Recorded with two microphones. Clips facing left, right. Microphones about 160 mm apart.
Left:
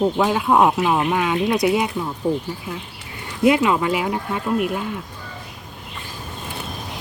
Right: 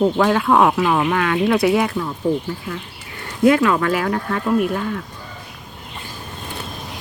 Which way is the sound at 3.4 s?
15° left (ahead or behind).